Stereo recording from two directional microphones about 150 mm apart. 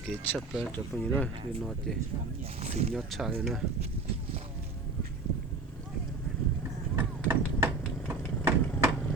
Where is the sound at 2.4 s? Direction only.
45° right (ahead or behind).